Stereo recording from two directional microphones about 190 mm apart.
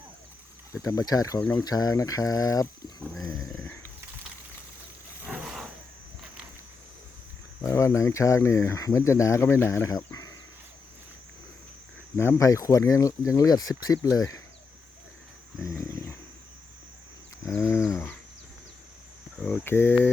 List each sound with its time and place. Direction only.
0.7 s speech: 15° left (ahead or behind)
3.0 s roaring cats: centre (ahead or behind)
3.6 s wild animals: 15° left (ahead or behind)
5.2 s roar: 5° right (ahead or behind)
7.6 s speech: 15° left (ahead or behind)
12.1 s speech: 15° left (ahead or behind)
15.6 s a sound: 15° left (ahead or behind)
17.5 s wild animals: 15° left (ahead or behind)
19.4 s speech: 5° left (ahead or behind)